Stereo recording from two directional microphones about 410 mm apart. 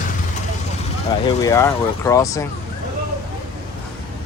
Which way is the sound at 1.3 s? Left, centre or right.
Centre.